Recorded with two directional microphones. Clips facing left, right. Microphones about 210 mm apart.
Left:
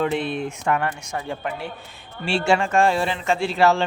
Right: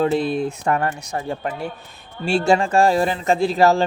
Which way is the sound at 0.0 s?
40° right (ahead or behind).